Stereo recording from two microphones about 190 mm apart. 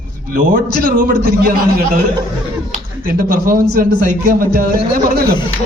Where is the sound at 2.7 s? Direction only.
50° right (ahead or behind).